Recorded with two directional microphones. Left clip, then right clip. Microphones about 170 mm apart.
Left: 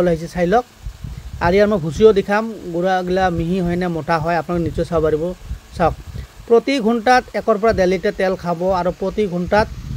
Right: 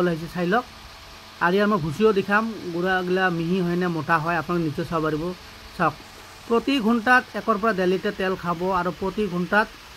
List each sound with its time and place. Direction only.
0.0 s speech: 30° left (ahead or behind)
6.5 s speech: 25° left (ahead or behind)